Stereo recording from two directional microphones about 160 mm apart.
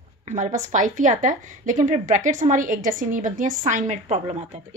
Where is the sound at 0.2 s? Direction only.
50° right (ahead or behind).